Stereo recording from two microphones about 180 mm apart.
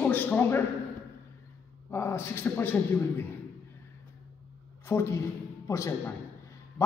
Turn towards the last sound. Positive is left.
turn(degrees=15)  # may be behind; listen again after turning